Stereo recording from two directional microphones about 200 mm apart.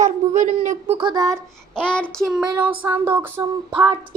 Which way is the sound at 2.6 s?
10° right (ahead or behind).